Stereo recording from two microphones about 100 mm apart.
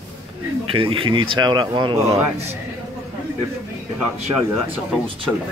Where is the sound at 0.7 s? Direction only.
65° right (ahead or behind); by 2.0 s 50° right (ahead or behind).